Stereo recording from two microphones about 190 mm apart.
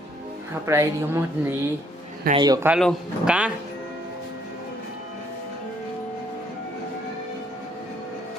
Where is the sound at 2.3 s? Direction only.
20° right (ahead or behind).